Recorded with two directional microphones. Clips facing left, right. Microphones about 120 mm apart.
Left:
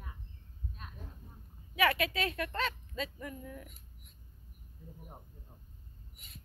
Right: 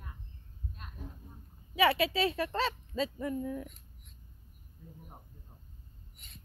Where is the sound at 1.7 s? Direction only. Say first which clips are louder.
Right 3 dB; 30° right (ahead or behind).